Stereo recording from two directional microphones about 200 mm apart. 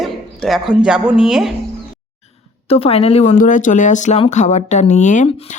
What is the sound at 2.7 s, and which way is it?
Speech, 30° left (ahead or behind).